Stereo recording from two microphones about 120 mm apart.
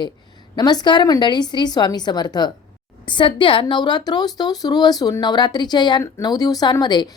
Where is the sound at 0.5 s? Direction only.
35° left (ahead or behind).